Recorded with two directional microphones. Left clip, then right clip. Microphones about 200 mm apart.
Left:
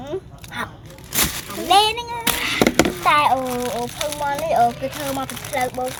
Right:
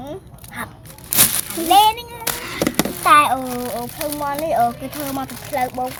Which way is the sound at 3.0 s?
25° right (ahead or behind).